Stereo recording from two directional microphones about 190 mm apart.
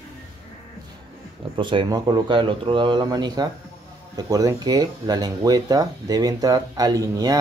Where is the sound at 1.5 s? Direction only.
25° right (ahead or behind).